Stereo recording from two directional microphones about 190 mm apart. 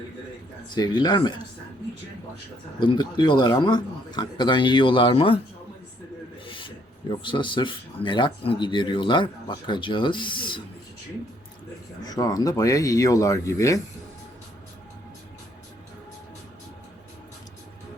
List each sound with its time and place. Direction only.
0.7 s speech: 20° left (ahead or behind)
2.8 s speech: 25° left (ahead or behind)
6.4 s speech: 25° left (ahead or behind)
12.0 s speech: 20° left (ahead or behind)